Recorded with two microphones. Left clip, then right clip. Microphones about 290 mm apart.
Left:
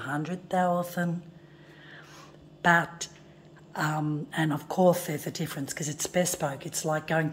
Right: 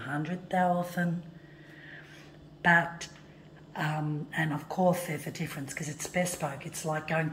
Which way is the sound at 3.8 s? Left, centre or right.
Left.